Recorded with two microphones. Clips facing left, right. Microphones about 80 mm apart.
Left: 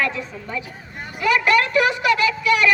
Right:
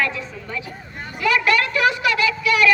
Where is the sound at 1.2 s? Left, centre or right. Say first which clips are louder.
Left 1 dB; left.